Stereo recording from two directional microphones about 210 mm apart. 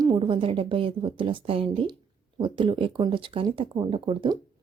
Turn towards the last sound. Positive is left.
turn(degrees=-25)  # may be behind; listen again after turning